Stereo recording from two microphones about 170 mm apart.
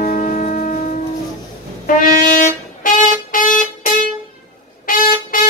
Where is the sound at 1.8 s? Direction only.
55° left (ahead or behind).